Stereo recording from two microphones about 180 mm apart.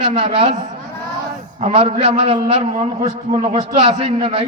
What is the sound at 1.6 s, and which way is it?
A man's voice, 35° right (ahead or behind).